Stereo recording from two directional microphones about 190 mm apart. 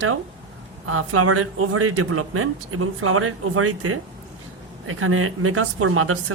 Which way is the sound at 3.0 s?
90° right.